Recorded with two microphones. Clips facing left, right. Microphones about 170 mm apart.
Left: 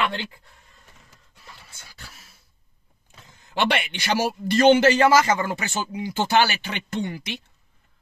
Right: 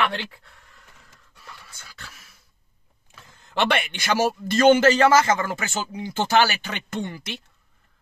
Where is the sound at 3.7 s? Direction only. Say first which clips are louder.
Right 1 dB; 45° right (ahead or behind).